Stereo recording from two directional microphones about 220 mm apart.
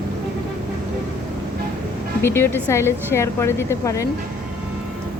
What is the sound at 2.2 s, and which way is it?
A woman's voice, 10° left (ahead or behind).